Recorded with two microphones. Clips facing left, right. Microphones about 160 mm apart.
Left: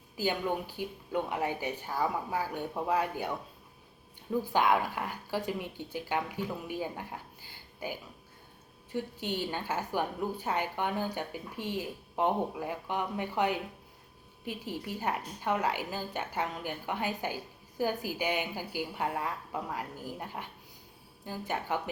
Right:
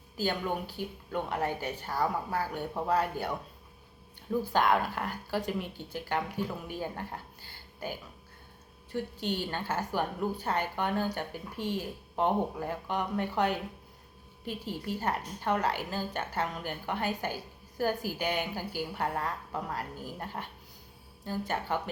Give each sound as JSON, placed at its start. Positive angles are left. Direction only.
{"t": 0.2, "sound": "a woman's voice", "side_deg": 15}
{"t": 4.5, "sound": "a woman's voice", "side_deg": 10}
{"t": 8.9, "sound": "a woman's voice", "side_deg": 15}